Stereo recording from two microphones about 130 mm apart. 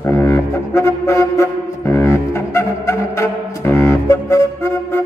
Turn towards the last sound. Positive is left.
turn(degrees=20)  # may be behind; listen again after turning